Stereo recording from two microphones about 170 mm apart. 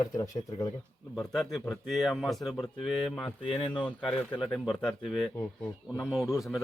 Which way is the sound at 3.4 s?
35° left (ahead or behind).